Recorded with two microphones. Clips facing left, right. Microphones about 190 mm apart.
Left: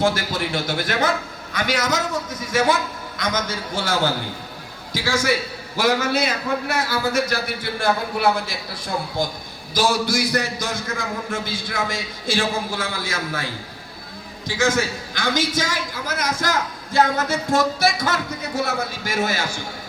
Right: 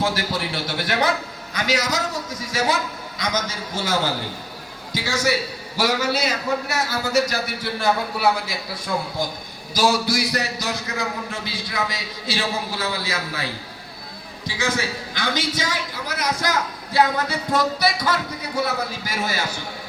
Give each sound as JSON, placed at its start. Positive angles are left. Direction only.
{"t": 0.5, "sound": "a man's voice", "side_deg": 50}
{"t": 9.7, "sound": "a man's voice", "side_deg": 50}
{"t": 14.4, "sound": "a man's voice", "side_deg": 50}